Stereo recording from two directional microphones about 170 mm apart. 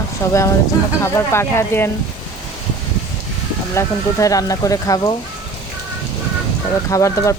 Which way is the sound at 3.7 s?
20° left (ahead or behind).